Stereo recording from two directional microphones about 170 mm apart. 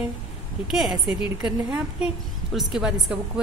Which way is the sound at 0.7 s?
5° right (ahead or behind).